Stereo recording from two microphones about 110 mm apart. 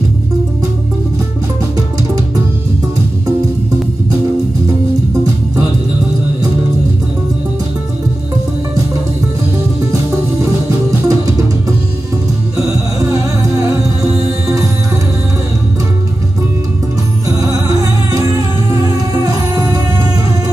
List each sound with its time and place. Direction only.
11.1 s music: 30° right (ahead or behind)
13.1 s music: 30° right (ahead or behind)
17.3 s music: 30° right (ahead or behind)